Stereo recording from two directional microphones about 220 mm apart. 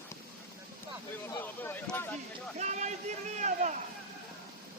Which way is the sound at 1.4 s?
10° left (ahead or behind).